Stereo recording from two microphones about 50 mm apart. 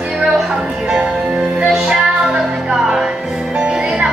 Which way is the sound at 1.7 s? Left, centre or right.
Centre.